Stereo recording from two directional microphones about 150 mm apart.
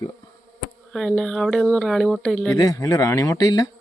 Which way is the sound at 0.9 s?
5° left (ahead or behind).